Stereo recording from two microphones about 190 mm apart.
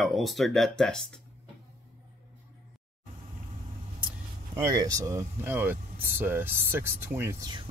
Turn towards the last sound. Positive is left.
turn(degrees=-20)  # may be behind; listen again after turning